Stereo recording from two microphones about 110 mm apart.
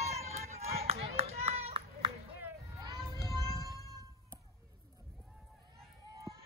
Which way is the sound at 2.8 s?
35° right (ahead or behind).